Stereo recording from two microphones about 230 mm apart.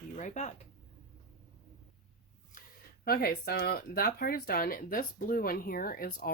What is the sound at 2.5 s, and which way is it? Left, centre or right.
Speech, left.